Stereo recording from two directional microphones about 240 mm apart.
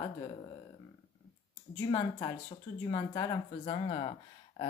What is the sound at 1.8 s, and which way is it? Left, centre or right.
Speech, centre.